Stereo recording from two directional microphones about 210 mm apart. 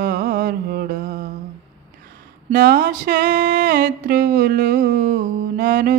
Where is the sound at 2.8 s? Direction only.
45° right (ahead or behind).